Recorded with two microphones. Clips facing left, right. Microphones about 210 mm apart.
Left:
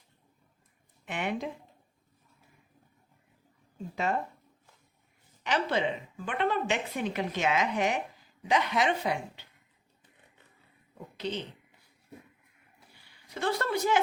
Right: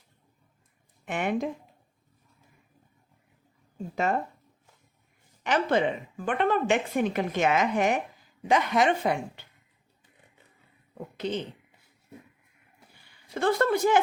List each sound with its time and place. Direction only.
1.0 s a woman's voice: 50° right (ahead or behind)
3.9 s a woman's voice: 50° right (ahead or behind)
5.4 s a woman's voice: 50° right (ahead or behind)
10.9 s a sound: 50° right (ahead or behind)
13.4 s a woman's voice: 50° right (ahead or behind)